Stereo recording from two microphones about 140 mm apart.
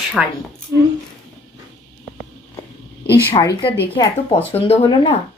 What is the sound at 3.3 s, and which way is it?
Speech, 35° left (ahead or behind).